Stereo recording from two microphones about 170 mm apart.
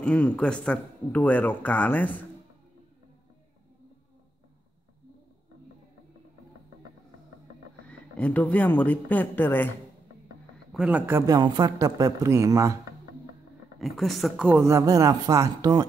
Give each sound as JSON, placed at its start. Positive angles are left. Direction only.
{"t": 0.0, "sound": "speech", "side_deg": 5}
{"t": 8.2, "sound": "speech", "side_deg": 10}
{"t": 10.7, "sound": "a man's voice", "side_deg": -5}
{"t": 13.7, "sound": "speech", "side_deg": 0}
{"t": 14.6, "sound": "a man's voice", "side_deg": -20}